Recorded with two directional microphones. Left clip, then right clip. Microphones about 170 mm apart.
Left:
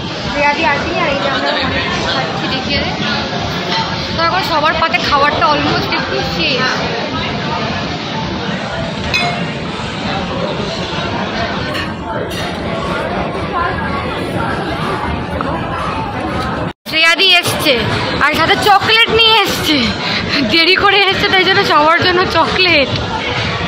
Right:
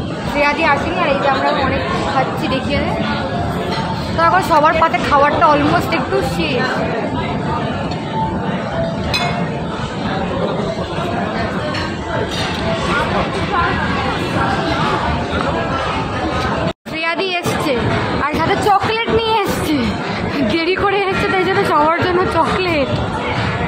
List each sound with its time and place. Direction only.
5.1 s speech: 20° right (ahead or behind)
17.0 s a woman's voice: centre (ahead or behind)